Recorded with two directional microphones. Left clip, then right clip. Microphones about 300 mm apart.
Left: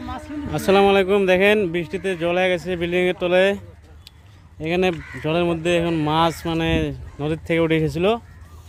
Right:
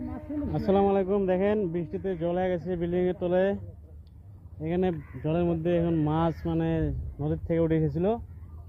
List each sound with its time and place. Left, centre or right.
0.5 s speech: left
4.6 s speech: left